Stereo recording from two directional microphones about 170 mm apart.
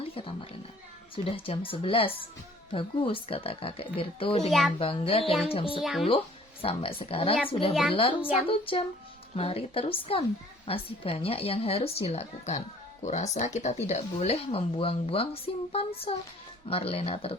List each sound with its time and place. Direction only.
0.0 s speech: 35° left (ahead or behind)
4.4 s a child's voice: centre (ahead or behind)
4.8 s speech: 35° left (ahead or behind)
5.2 s a child's voice: centre (ahead or behind)
5.5 s speech: 35° left (ahead or behind)
5.8 s a child's voice: centre (ahead or behind)
6.1 s speech: 30° left (ahead or behind)